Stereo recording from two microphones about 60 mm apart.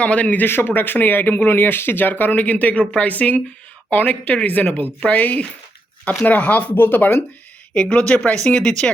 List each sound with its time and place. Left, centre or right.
0.0 s speech: left
0.4 s speech: left
7.7 s speech: centre